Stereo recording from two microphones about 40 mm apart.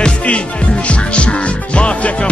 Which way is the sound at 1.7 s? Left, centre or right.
Left.